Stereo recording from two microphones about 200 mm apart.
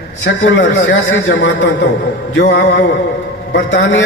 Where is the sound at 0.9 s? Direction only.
65° left (ahead or behind).